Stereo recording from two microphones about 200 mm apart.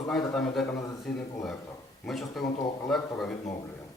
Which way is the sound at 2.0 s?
Centre (ahead or behind).